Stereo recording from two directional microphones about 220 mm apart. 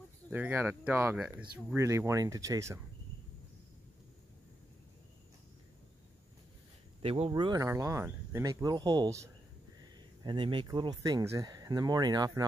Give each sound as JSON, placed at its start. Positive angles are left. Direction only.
{"t": 0.3, "sound": "speech", "side_deg": -10}
{"t": 7.0, "sound": "speech", "side_deg": -25}